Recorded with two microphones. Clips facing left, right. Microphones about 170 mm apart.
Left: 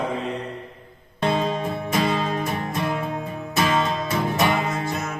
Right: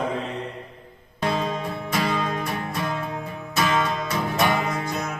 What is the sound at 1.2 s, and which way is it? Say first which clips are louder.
Music: left 3 dB; 25° left (ahead or behind).